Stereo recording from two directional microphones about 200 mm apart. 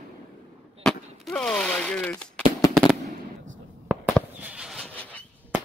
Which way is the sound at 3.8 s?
5° right (ahead or behind).